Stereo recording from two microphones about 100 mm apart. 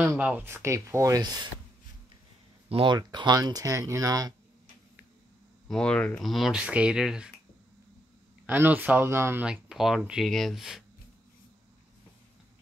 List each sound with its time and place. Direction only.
0.0 s speech: 10° right (ahead or behind); by 1.5 s 45° right (ahead or behind)
2.7 s speech: 55° right (ahead or behind)
3.0 s speech: 45° right (ahead or behind)
5.7 s speech: 10° left (ahead or behind)
6.2 s speech: centre (ahead or behind)
8.5 s speech: 20° right (ahead or behind)
9.4 s speech: 5° right (ahead or behind)